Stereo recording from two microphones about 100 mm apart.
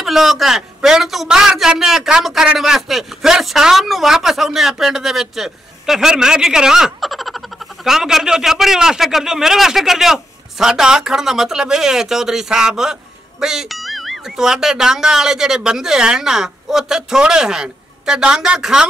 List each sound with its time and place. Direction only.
0.0 s a man's voice: centre (ahead or behind)